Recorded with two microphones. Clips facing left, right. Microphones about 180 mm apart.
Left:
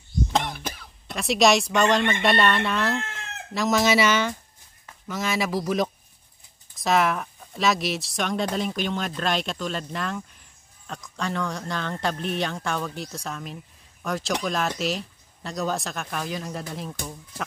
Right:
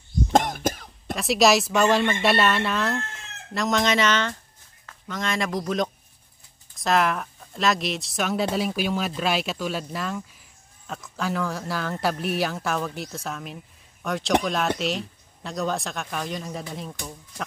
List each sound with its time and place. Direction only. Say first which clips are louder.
0.3 s cough: right 9 dB; 45° right (ahead or behind)
1.1 s speech: right 1 dB; centre (ahead or behind)